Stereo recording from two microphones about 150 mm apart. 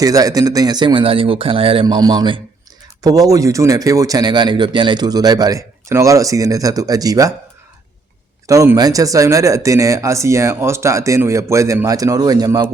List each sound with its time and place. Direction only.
0.0 s speech: 25° right (ahead or behind)
8.4 s speech: 20° right (ahead or behind)